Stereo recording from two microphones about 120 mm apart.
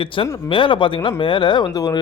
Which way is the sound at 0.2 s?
45° left (ahead or behind).